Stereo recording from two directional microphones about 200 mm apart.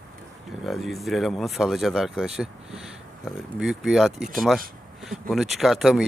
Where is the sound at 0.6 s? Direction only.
Centre (ahead or behind).